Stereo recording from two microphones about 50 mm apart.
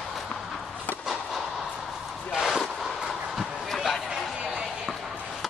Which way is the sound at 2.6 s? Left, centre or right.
Centre.